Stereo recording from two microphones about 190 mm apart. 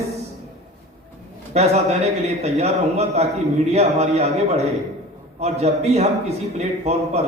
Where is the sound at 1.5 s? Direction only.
35° right (ahead or behind).